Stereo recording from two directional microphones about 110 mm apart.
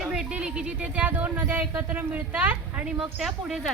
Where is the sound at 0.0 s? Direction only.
10° right (ahead or behind).